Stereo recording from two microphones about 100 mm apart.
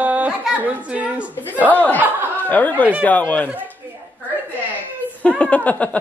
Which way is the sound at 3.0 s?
15° left (ahead or behind).